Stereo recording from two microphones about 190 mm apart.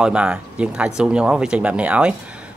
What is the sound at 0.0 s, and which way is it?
Speech, 5° right (ahead or behind).